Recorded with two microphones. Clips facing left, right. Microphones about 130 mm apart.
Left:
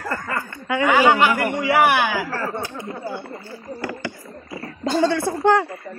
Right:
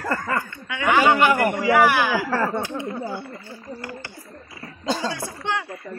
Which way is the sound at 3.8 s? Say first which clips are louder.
Left 6 dB; 90° left.